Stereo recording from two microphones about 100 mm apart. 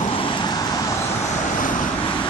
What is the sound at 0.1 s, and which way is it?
Vehicle, 55° left (ahead or behind).